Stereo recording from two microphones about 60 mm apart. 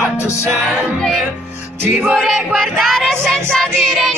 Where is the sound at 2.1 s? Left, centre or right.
Centre.